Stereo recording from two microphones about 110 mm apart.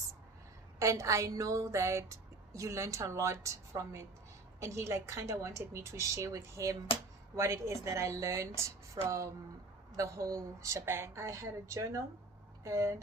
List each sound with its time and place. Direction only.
0.8 s speech: 30° right (ahead or behind)